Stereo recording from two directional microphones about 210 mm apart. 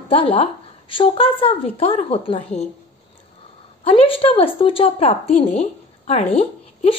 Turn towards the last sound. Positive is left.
turn(degrees=30)  # may be behind; listen again after turning